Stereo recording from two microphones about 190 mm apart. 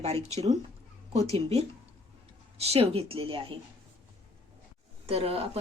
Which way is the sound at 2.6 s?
30° right (ahead or behind).